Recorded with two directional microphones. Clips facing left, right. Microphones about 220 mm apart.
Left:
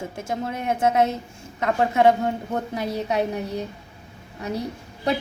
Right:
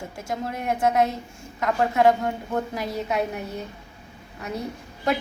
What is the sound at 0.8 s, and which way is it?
Speech, 25° left (ahead or behind).